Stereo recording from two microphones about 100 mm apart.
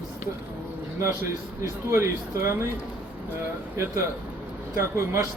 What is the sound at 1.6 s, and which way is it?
Speech, 30° right (ahead or behind).